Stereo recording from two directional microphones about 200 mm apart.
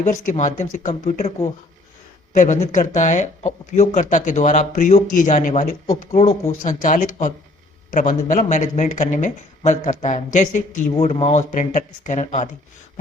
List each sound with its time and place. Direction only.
0.0 s speech: 35° left (ahead or behind)
2.3 s speech: 40° left (ahead or behind)